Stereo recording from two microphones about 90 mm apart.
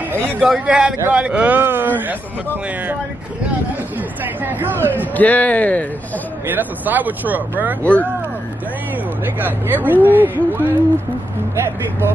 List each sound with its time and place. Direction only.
0.4 s a man's voice: 5° right (ahead or behind)
4.2 s speech: 20° right (ahead or behind)
5.1 s a man's voice: 15° left (ahead or behind)
6.4 s speech: 20° right (ahead or behind)
7.8 s a man's voice: 15° left (ahead or behind)
9.2 s speech: 20° right (ahead or behind)